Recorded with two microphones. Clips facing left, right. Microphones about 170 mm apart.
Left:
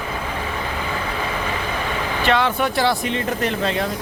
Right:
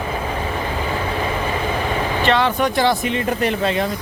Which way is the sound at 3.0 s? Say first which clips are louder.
Right 2 dB; 10° right (ahead or behind).